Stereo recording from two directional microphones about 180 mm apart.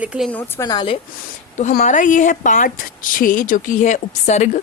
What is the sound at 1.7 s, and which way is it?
A woman's voice, 45° left (ahead or behind).